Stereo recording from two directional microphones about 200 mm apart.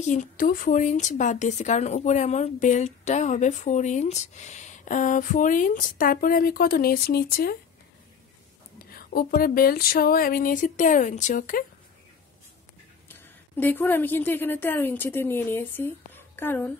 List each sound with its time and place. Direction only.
0.0 s a woman's voice: 35° left (ahead or behind)
8.7 s a sound: 50° left (ahead or behind)
13.1 s a woman's voice: 10° left (ahead or behind)